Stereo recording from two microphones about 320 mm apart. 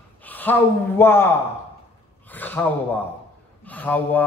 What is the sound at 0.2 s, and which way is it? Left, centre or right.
A man's voice, centre.